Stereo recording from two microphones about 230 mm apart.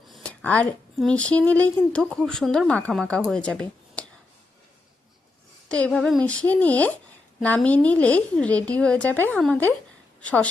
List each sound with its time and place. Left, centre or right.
0.1 s speech: centre
5.8 s a woman's voice: centre